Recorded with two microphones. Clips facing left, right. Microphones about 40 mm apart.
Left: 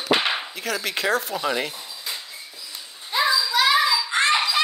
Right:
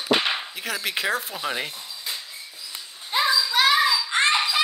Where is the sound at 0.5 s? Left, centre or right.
Centre.